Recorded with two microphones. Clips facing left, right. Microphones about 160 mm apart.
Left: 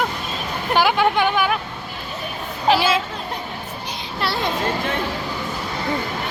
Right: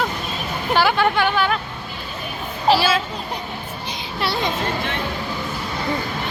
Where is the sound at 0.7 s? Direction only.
15° left (ahead or behind).